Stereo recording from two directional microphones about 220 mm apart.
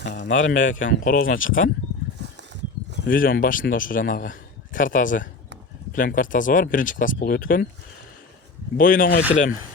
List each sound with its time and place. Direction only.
0.0 s a man's voice: 35° left (ahead or behind)
3.1 s a man's voice: 40° left (ahead or behind)
8.8 s a man's voice: 40° left (ahead or behind)